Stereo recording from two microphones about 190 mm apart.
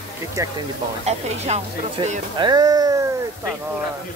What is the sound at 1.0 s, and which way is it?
Speech, 35° right (ahead or behind).